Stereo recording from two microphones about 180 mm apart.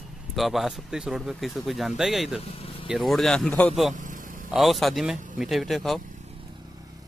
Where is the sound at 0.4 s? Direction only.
Centre (ahead or behind).